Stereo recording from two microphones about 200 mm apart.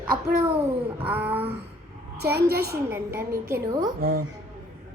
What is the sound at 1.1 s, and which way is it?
Speech, 10° right (ahead or behind).